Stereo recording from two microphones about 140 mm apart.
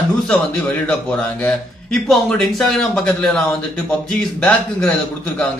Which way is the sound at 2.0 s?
5° left (ahead or behind).